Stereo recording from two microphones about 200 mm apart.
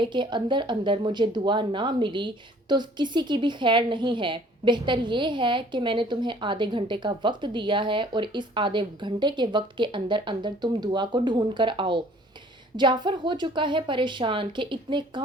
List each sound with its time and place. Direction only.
0.0 s speech: 25° right (ahead or behind)